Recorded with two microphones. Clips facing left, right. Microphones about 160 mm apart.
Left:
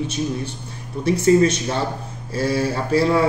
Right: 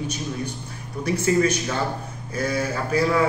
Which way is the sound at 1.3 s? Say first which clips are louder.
Left 5 dB; 25° left (ahead or behind).